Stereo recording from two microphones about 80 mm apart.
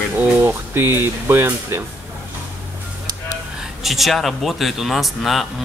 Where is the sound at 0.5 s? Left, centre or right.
Right.